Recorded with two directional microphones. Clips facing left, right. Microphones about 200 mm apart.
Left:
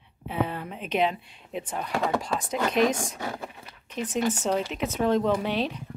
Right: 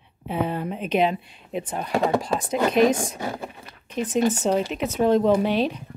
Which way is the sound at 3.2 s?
25° right (ahead or behind).